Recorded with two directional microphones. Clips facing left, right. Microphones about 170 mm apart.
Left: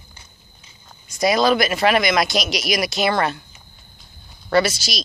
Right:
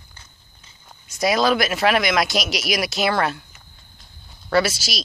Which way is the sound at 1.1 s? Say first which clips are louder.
Left 2 dB; 5° right (ahead or behind).